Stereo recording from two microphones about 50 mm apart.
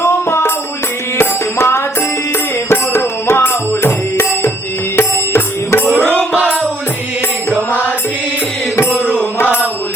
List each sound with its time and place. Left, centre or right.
0.0 s music: left
4.9 s music: left
6.3 s music: right
8.7 s music: left